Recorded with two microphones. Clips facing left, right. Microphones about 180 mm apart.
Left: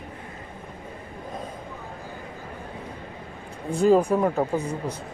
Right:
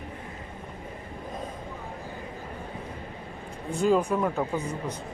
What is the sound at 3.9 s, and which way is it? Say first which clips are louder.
Speech: left 5 dB; 35° left (ahead or behind).